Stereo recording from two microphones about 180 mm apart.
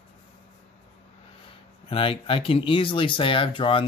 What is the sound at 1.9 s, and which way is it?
Speech, 30° left (ahead or behind).